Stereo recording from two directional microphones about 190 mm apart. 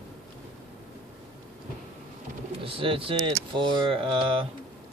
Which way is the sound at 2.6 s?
30° right (ahead or behind).